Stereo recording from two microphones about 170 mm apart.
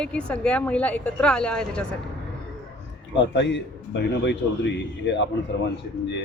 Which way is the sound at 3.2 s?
90° left.